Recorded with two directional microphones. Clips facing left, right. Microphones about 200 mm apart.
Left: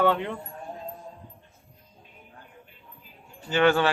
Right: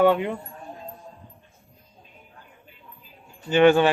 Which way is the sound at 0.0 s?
15° right (ahead or behind).